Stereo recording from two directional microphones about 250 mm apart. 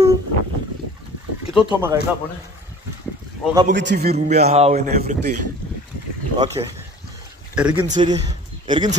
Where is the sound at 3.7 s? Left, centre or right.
Right.